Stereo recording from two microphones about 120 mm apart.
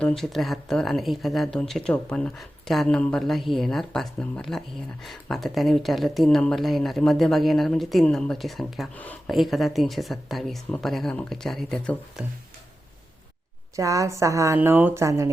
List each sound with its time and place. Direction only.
0.0 s speech: 5° left (ahead or behind)
9.0 s speech: 15° left (ahead or behind)
9.3 s speech: centre (ahead or behind)
13.7 s a woman's voice: 25° right (ahead or behind)